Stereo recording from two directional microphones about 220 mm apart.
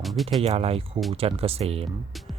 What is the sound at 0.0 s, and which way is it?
Speech, centre (ahead or behind).